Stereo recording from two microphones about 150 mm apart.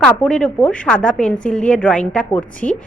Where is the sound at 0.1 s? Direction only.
5° left (ahead or behind).